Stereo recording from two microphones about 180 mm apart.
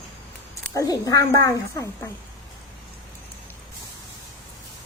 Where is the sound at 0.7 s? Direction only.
20° left (ahead or behind).